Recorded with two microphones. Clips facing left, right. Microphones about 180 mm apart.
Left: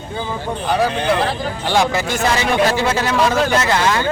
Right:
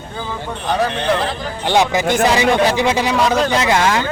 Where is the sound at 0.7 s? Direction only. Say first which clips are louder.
Left 1 dB; 5° left (ahead or behind).